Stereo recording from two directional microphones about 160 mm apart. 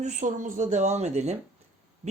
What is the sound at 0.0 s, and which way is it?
Speech, 50° right (ahead or behind).